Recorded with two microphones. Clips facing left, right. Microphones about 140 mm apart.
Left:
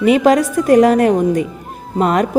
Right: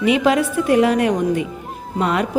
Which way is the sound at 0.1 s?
40° left (ahead or behind).